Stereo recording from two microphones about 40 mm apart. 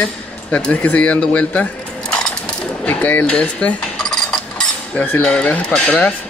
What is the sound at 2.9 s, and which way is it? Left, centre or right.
Speech, left.